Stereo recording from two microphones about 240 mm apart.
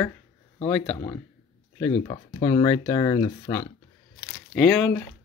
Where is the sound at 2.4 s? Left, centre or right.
Centre.